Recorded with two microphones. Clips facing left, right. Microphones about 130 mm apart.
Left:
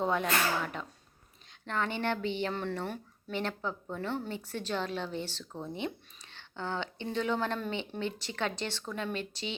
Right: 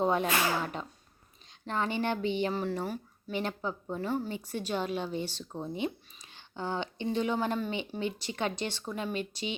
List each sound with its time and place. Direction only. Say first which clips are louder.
0.0 s speech: right 2 dB; 20° right (ahead or behind)
2.6 s speech: right 2 dB; 5° right (ahead or behind)
3.3 s speech: right 1 dB; 15° right (ahead or behind)